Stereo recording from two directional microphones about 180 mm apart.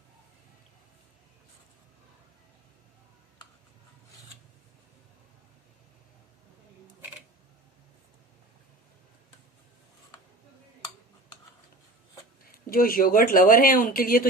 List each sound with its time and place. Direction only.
12.5 s speech: 55° left (ahead or behind)